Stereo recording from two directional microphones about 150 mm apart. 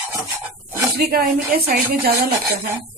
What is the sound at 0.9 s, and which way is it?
Speech, 90° right.